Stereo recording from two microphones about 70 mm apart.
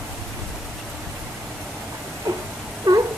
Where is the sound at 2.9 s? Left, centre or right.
Right.